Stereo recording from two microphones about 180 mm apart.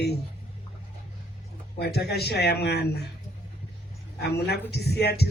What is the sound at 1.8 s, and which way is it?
A man's voice, 65° left (ahead or behind).